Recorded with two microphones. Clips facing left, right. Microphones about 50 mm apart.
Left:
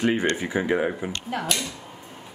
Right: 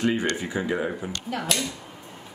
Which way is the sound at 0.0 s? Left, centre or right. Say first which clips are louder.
Left 2 dB; left.